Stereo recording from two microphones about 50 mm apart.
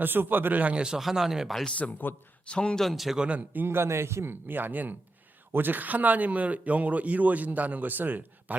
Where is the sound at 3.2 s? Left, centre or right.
Right.